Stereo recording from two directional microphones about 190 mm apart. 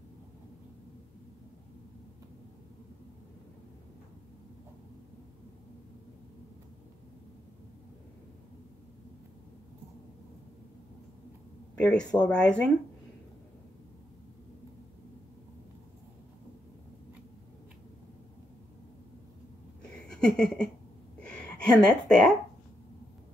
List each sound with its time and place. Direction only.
11.7 s speech: 5° left (ahead or behind)
20.1 s a sound: 5° left (ahead or behind)
21.2 s gasp: 5° left (ahead or behind)